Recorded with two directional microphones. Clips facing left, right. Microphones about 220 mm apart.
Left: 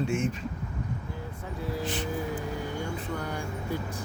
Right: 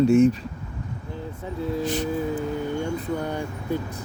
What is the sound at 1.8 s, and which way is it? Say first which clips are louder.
Music: right 6 dB; 40° right (ahead or behind).